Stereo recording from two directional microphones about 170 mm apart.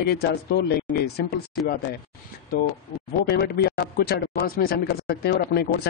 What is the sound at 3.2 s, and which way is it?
Speech, 70° left (ahead or behind).